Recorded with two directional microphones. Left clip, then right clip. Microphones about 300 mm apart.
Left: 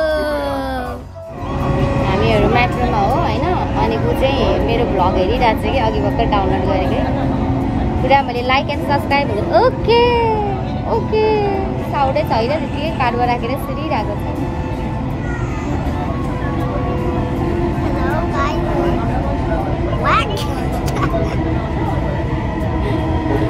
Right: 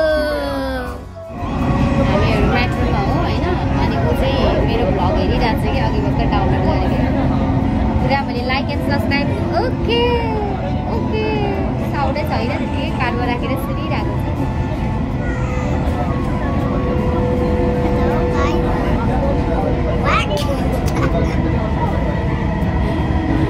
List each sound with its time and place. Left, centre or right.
3.8 s a sound: left
8.1 s vehicle: left
11.1 s music: left
13.0 s vehicle: left